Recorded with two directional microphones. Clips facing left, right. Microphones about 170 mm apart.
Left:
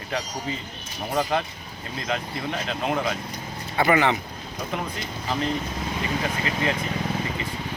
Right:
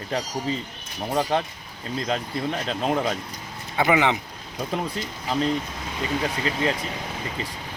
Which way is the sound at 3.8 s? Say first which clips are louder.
Even; 15° right (ahead or behind).